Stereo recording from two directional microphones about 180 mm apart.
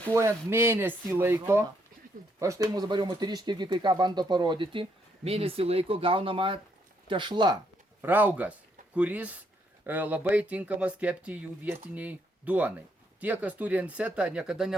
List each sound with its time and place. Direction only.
0.1 s speech: 15° right (ahead or behind)
2.7 s speech: 25° right (ahead or behind)
8.0 s speech: 10° right (ahead or behind)